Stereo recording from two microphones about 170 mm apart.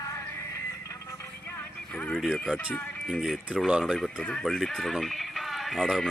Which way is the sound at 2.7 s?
5° left (ahead or behind).